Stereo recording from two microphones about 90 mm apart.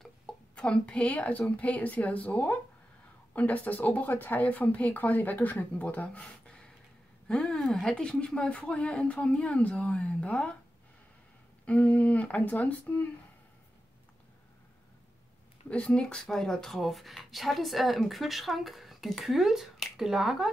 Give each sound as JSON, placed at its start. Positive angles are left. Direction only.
{"t": 0.0, "sound": "a woman's voice", "side_deg": 10}
{"t": 11.6, "sound": "a woman's voice", "side_deg": 15}
{"t": 15.7, "sound": "speech", "side_deg": 10}